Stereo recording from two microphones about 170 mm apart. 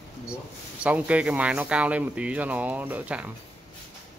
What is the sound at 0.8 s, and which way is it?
Speech, 10° right (ahead or behind).